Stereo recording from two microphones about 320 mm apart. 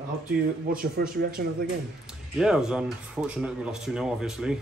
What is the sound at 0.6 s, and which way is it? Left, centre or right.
Speech, right.